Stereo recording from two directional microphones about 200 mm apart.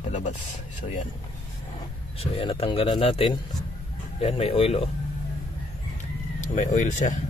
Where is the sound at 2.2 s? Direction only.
25° left (ahead or behind).